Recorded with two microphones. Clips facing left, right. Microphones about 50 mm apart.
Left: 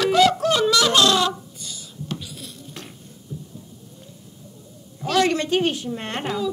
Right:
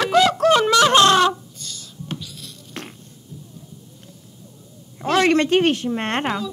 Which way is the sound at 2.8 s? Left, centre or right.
Right.